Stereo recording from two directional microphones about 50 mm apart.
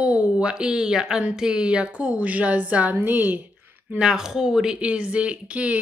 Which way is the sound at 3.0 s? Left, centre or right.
Right.